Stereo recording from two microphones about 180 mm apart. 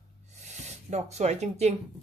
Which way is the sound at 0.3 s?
40° right (ahead or behind).